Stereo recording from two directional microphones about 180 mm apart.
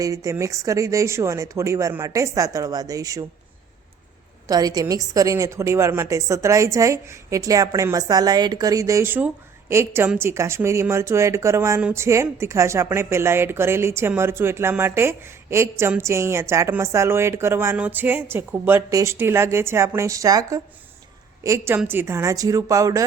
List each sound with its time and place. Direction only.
0.0 s a woman's voice: 20° right (ahead or behind)
4.4 s a woman's voice: 20° right (ahead or behind)